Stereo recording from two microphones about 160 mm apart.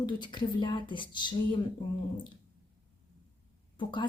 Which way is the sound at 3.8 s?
30° left (ahead or behind).